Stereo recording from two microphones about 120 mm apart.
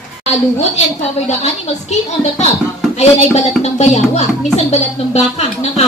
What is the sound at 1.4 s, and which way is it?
Speech, 70° left (ahead or behind).